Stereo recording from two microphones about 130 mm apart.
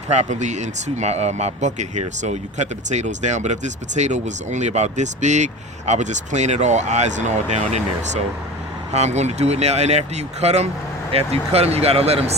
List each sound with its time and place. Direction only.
0.1 s speech: 65° right (ahead or behind)